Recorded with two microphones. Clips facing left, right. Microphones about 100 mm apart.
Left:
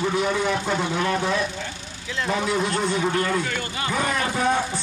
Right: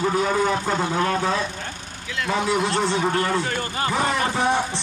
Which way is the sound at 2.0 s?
30° left (ahead or behind).